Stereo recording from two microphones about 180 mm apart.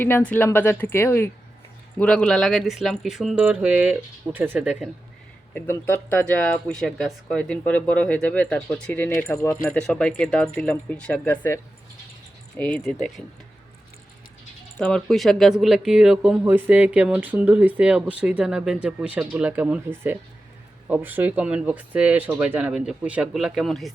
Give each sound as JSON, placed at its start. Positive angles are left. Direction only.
{"t": 0.0, "sound": "speech", "side_deg": 10}
{"t": 5.5, "sound": "speech", "side_deg": 10}
{"t": 14.8, "sound": "speech", "side_deg": 5}